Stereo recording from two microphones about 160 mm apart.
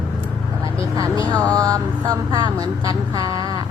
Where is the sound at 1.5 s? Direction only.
25° right (ahead or behind).